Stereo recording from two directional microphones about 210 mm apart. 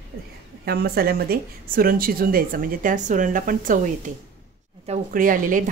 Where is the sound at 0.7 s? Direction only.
45° right (ahead or behind).